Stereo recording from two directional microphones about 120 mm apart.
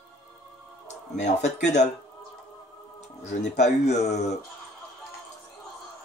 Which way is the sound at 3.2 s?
70° left (ahead or behind).